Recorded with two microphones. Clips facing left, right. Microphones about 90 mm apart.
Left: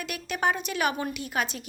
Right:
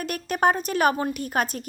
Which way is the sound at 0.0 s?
45° right (ahead or behind).